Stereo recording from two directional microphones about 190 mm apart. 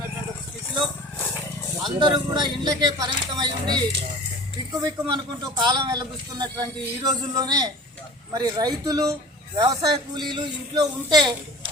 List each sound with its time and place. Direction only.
2.0 s speech: 25° right (ahead or behind)